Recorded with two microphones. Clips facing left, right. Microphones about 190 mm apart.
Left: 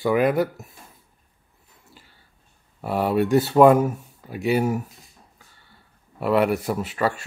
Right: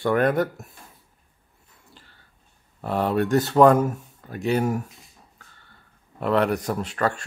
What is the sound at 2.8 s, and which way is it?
Speech, 5° left (ahead or behind).